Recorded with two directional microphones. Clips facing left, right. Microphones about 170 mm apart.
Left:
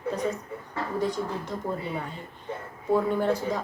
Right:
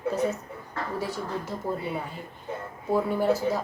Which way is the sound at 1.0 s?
10° right (ahead or behind).